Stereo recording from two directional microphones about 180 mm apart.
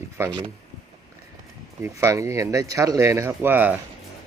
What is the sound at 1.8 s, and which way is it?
Speech, 15° right (ahead or behind).